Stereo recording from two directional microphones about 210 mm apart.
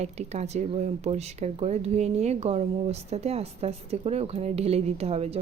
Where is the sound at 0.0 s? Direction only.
30° right (ahead or behind).